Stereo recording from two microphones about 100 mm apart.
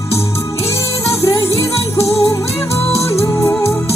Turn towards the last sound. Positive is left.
turn(degrees=25)  # may be behind; listen again after turning